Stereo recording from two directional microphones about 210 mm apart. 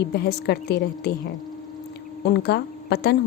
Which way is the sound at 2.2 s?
50° left (ahead or behind).